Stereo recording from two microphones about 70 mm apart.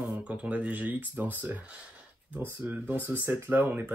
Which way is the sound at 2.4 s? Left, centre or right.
Right.